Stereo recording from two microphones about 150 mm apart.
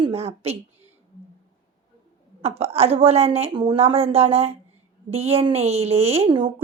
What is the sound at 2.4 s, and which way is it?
A woman's voice, 45° right (ahead or behind).